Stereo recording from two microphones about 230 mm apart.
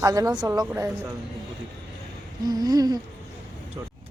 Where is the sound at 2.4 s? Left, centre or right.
Centre.